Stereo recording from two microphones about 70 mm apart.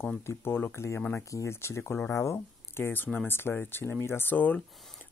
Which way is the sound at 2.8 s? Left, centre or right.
Left.